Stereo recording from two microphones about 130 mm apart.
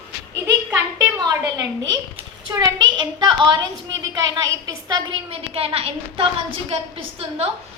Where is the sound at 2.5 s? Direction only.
35° right (ahead or behind).